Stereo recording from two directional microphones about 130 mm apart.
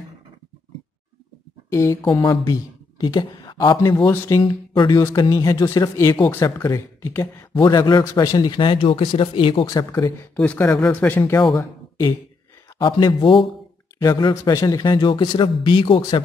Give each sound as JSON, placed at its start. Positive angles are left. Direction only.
{"t": 1.7, "sound": "speech", "side_deg": 25}
{"t": 4.0, "sound": "speech", "side_deg": 15}
{"t": 4.4, "sound": "speech", "side_deg": 35}
{"t": 7.6, "sound": "speech", "side_deg": 30}
{"t": 9.7, "sound": "speech", "side_deg": 25}
{"t": 10.3, "sound": "speech", "side_deg": 10}
{"t": 12.8, "sound": "speech", "side_deg": 40}
{"t": 13.9, "sound": "speech", "side_deg": 25}